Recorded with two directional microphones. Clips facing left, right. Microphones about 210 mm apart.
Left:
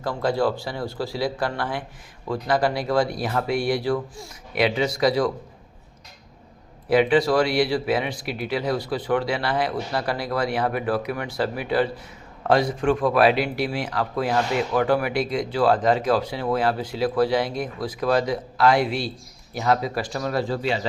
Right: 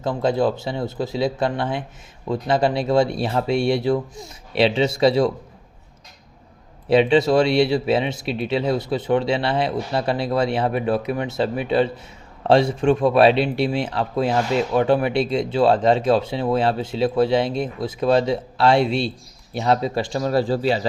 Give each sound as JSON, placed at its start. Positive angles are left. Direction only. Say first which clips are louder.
{"t": 0.0, "sound": "speech", "louder": "right 3 dB", "side_deg": -20}
{"t": 6.8, "sound": "speech", "louder": "right 3 dB", "side_deg": -25}